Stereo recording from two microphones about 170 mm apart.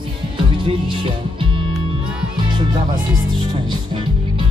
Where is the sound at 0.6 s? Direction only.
30° right (ahead or behind).